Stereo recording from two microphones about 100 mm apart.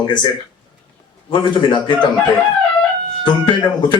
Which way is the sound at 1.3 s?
50° left (ahead or behind).